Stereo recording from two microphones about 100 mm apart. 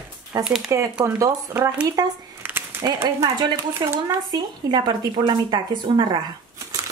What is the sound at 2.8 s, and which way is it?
Speech, 30° right (ahead or behind).